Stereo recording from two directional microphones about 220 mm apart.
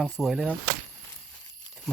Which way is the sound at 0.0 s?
Centre (ahead or behind).